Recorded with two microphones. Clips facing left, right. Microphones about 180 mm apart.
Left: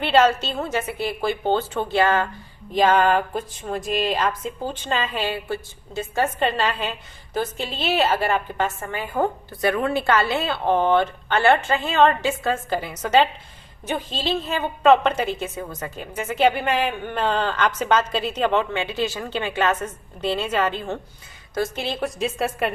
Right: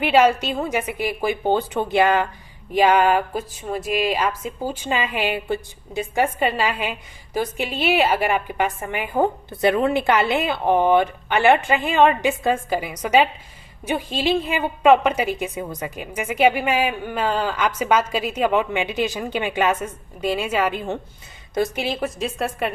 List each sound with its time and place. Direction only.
0.0 s a woman's voice: 10° right (ahead or behind)